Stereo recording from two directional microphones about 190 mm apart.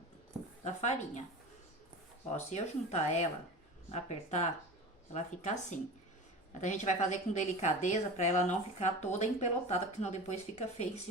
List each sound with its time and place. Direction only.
0.6 s a woman's voice: 40° left (ahead or behind)
2.3 s a woman's voice: 35° left (ahead or behind)